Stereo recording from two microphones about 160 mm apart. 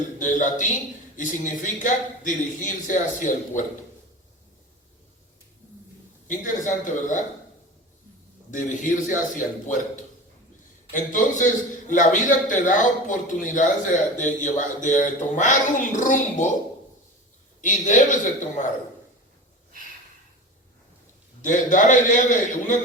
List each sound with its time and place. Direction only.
0.2 s a man's voice: 55° left (ahead or behind)
6.2 s a man's voice: 55° left (ahead or behind)
8.4 s a man's voice: 55° left (ahead or behind)
17.6 s a man's voice: 50° left (ahead or behind)
21.4 s a man's voice: 55° left (ahead or behind)